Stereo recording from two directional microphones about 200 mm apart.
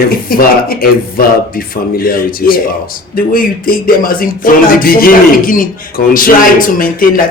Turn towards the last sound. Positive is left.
turn(degrees=45)  # may be behind; listen again after turning